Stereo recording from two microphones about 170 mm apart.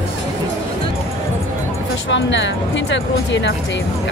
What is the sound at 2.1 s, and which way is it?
Speech, 90° left.